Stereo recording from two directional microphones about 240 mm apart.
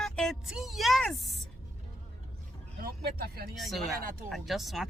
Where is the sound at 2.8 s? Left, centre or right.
Right.